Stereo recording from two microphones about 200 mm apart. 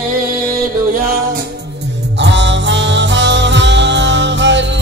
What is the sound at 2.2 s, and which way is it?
Music, 60° right (ahead or behind).